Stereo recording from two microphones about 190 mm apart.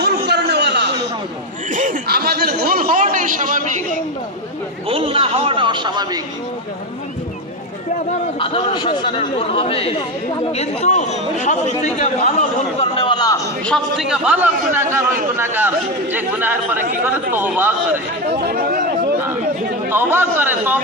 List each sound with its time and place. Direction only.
0.0 s a sound: 60° right (ahead or behind)
1.7 s a sound: 45° right (ahead or behind)
4.9 s a man's voice: 30° right (ahead or behind)
8.4 s a man's voice: 30° left (ahead or behind)
13.7 s a man's voice: centre (ahead or behind)
18.3 s speech: 60° right (ahead or behind)
19.9 s speech: 10° right (ahead or behind)